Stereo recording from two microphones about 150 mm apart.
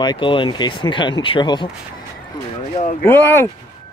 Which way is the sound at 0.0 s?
30° left (ahead or behind).